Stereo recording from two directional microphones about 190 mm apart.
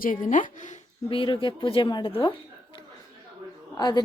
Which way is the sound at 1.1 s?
25° left (ahead or behind).